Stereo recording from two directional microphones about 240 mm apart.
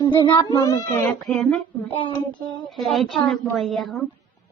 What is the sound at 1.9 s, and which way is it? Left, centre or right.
Child singing, left.